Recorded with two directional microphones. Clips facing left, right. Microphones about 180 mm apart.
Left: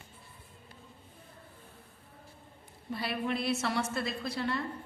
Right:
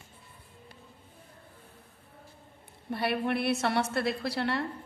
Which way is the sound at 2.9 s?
60° right (ahead or behind).